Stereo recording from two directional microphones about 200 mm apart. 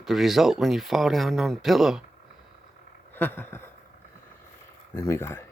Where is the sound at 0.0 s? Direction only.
Centre (ahead or behind).